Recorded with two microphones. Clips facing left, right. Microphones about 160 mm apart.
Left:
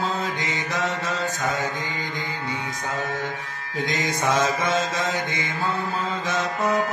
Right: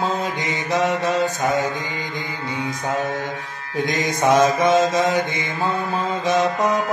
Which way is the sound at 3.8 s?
15° right (ahead or behind).